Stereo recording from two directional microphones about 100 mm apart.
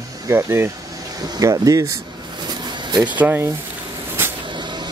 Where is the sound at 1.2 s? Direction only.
40° right (ahead or behind).